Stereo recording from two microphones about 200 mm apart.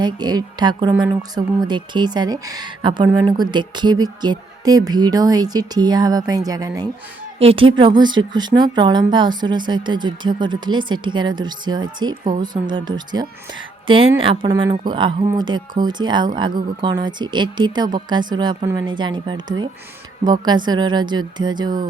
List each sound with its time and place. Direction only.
0.0 s a woman's voice: 20° right (ahead or behind)